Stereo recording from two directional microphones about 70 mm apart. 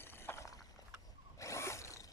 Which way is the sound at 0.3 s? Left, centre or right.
Left.